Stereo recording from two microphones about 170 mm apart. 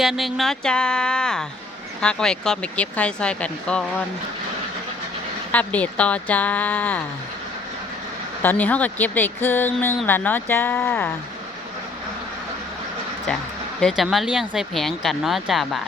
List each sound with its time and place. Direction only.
0.0 s speech: centre (ahead or behind)
5.5 s speech: 10° left (ahead or behind)
8.4 s speech: 10° left (ahead or behind)
13.8 s speech: centre (ahead or behind)